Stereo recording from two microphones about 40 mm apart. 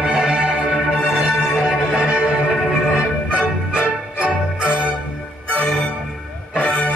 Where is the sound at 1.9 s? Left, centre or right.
Right.